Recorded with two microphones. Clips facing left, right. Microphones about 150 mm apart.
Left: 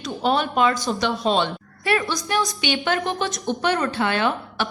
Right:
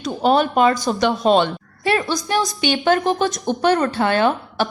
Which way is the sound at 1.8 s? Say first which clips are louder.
Right 3 dB; 30° right (ahead or behind).